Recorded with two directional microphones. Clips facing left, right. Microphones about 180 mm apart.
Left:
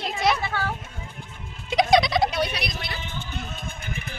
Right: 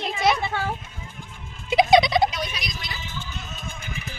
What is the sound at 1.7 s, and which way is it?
Turkey, centre (ahead or behind).